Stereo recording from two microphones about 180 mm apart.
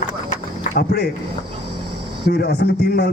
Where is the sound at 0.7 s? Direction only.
60° left (ahead or behind).